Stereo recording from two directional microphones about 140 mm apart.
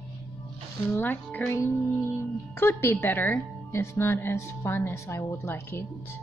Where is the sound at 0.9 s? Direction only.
15° left (ahead or behind).